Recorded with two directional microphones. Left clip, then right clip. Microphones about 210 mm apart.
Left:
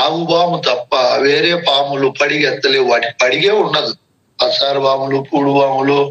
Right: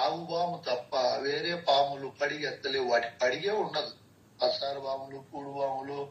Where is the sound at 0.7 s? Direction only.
90° left.